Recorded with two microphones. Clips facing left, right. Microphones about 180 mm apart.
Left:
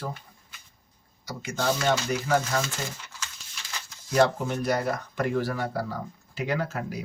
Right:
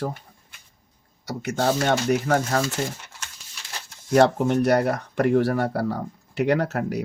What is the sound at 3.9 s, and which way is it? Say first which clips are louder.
Speech: right 5 dB; 55° right (ahead or behind).